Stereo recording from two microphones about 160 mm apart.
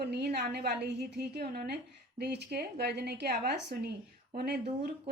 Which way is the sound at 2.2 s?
90° right.